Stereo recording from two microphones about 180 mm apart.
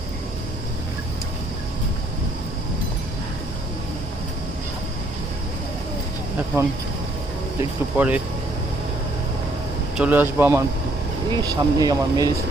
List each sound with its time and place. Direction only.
7.6 s speech: 10° right (ahead or behind)
10.0 s speech: 10° right (ahead or behind)
11.3 s speech: 25° right (ahead or behind)